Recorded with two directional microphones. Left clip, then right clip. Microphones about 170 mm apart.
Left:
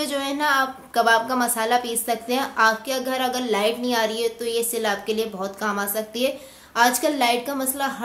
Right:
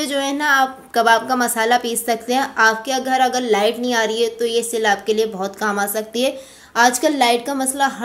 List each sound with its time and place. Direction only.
0.0 s a woman's voice: 20° right (ahead or behind)